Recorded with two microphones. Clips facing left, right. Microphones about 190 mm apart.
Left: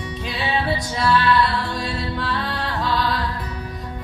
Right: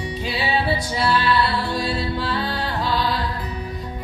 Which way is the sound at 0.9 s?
30° right (ahead or behind).